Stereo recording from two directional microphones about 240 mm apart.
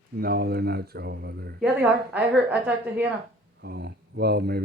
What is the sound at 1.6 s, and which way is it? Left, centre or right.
A woman's voice, centre.